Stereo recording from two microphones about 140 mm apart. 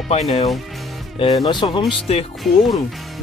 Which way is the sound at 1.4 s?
35° left (ahead or behind).